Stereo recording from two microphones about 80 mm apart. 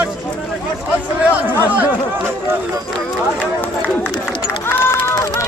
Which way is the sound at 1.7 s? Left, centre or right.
Right.